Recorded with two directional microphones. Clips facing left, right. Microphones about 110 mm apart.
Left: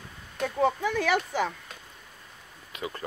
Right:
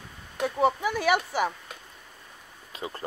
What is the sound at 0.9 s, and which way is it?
Speech, 10° right (ahead or behind).